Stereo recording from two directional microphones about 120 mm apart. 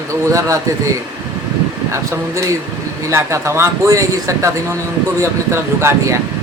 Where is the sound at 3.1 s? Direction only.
25° right (ahead or behind).